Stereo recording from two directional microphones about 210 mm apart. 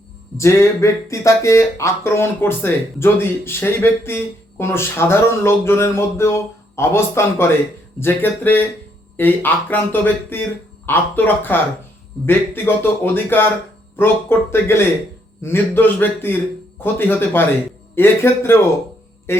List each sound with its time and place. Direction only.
0.3 s speech: 15° left (ahead or behind)
19.3 s music: 10° left (ahead or behind)